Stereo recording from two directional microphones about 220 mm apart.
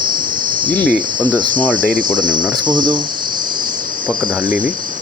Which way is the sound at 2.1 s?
20° right (ahead or behind).